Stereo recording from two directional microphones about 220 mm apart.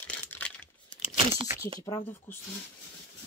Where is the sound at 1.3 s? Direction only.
15° right (ahead or behind).